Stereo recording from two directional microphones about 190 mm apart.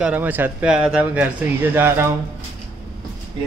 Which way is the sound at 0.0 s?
10° right (ahead or behind).